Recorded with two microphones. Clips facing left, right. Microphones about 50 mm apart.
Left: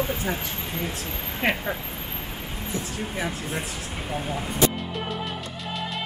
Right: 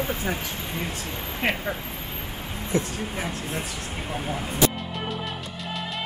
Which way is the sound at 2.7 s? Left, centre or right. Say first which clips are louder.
Right 8 dB; right.